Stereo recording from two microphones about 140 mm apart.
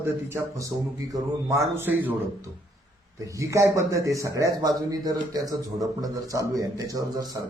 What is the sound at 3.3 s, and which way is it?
Speech, 20° right (ahead or behind).